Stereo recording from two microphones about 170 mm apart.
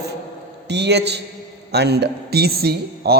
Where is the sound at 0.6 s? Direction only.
90° right.